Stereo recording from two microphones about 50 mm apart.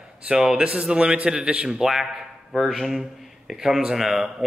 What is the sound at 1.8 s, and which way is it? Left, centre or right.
A man's voice, centre.